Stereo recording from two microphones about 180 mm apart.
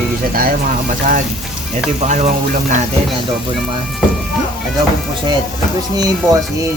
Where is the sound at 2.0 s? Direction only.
40° right (ahead or behind).